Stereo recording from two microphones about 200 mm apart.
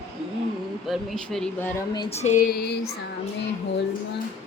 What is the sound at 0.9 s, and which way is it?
Speech, centre (ahead or behind).